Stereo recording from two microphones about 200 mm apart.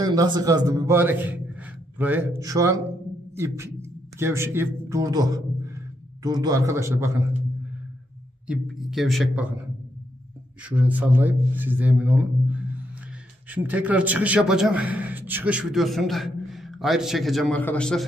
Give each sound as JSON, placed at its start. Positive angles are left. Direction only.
{"t": 0.0, "sound": "a man's voice", "side_deg": -20}
{"t": 8.5, "sound": "speech", "side_deg": 0}
{"t": 10.6, "sound": "a man's voice", "side_deg": -5}